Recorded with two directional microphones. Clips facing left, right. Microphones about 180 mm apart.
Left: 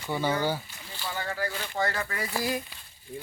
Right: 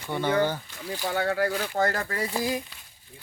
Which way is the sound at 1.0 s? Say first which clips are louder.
Right 7 dB; 70° right (ahead or behind).